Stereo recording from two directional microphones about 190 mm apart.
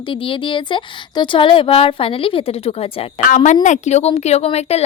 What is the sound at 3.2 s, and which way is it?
A woman's voice, 40° left (ahead or behind).